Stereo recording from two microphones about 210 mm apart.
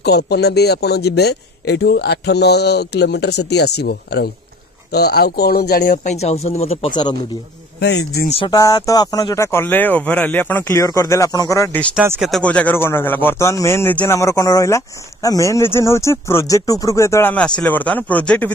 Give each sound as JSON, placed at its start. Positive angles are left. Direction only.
{"t": 0.0, "sound": "speech", "side_deg": 50}
{"t": 8.3, "sound": "speech", "side_deg": 20}
{"t": 11.9, "sound": "speech", "side_deg": -5}